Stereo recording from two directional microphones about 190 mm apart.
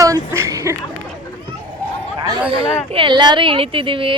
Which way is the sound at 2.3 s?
25° right (ahead or behind).